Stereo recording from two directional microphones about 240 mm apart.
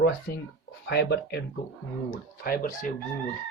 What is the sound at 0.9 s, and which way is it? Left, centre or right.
Speech, left.